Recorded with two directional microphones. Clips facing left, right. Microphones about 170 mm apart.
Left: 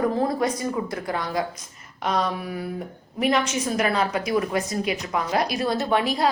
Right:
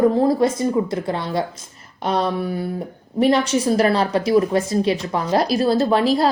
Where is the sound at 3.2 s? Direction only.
30° right (ahead or behind).